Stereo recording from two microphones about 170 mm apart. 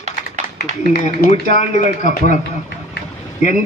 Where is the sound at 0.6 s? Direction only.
65° left (ahead or behind).